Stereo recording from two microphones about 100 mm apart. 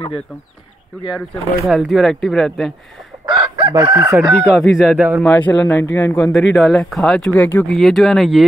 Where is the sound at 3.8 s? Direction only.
25° right (ahead or behind).